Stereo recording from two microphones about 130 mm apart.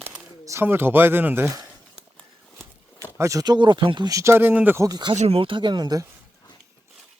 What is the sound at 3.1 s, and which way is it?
Speech, 25° right (ahead or behind).